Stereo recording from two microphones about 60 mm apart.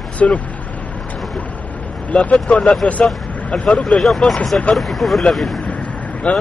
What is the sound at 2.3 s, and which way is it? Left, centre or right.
Speech, centre.